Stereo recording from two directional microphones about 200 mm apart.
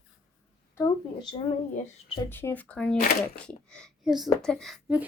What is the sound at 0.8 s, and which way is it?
Speech, 25° left (ahead or behind).